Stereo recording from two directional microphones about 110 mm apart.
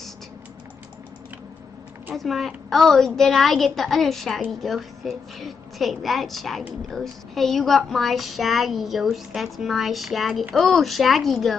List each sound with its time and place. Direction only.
2.1 s a woman's voice: centre (ahead or behind)